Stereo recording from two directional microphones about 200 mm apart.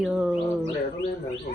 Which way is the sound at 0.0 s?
5° right (ahead or behind).